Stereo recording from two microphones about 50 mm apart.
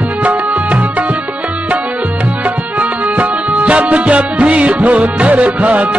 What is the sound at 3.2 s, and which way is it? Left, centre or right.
Music, right.